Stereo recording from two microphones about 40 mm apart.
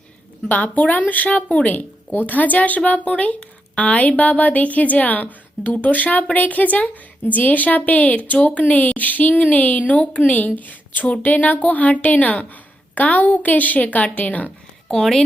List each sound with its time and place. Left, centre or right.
0.4 s a woman's voice: left
14.8 s speech: centre